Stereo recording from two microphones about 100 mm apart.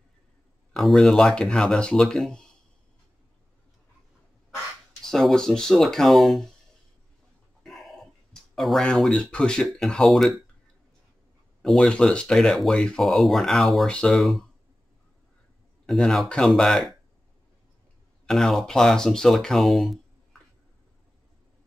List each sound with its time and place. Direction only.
0.7 s speech: centre (ahead or behind)
5.0 s speech: 5° left (ahead or behind)
7.6 s speech: centre (ahead or behind)
11.6 s speech: 5° left (ahead or behind)
15.9 s speech: 5° left (ahead or behind)
18.2 s speech: 5° left (ahead or behind)